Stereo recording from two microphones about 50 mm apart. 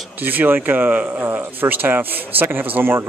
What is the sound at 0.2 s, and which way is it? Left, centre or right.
Speech, right.